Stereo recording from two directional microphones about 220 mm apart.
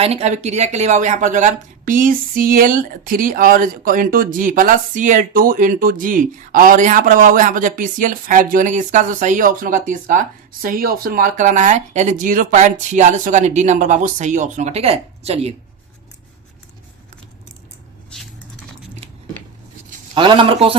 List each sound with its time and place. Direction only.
0.0 s speech: 30° right (ahead or behind)
20.1 s a man's voice: 20° right (ahead or behind)